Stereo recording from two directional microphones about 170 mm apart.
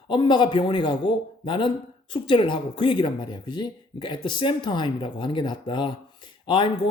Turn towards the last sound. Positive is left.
turn(degrees=30)  # may be behind; listen again after turning